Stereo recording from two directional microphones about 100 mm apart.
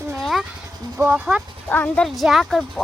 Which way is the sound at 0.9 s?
15° right (ahead or behind).